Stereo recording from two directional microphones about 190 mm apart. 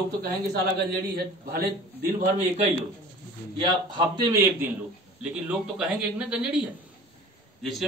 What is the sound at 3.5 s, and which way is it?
Speech, 25° right (ahead or behind).